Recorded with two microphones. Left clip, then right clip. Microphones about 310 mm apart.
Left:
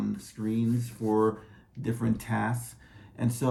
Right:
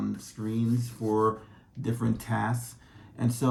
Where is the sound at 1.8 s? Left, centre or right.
Centre.